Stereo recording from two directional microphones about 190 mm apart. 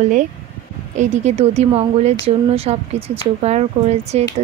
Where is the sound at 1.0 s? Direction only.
35° right (ahead or behind).